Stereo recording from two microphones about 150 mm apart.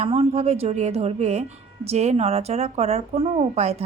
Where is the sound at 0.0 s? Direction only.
45° right (ahead or behind).